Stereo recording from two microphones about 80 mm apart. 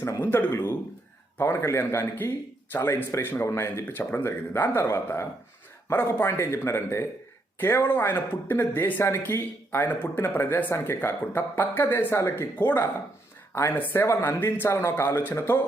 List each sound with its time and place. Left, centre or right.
0.2 s speech: left
5.9 s speech: left
6.2 s speech: left
12.5 s speech: left
13.5 s speech: left